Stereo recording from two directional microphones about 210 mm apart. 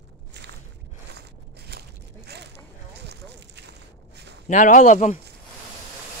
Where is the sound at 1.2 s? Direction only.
50° right (ahead or behind).